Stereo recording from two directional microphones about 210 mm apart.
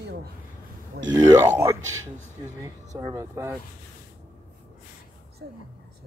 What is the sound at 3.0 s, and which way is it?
Speech, 15° right (ahead or behind).